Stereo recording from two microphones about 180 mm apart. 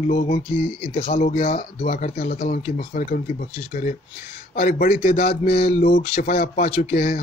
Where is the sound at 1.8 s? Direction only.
50° left (ahead or behind).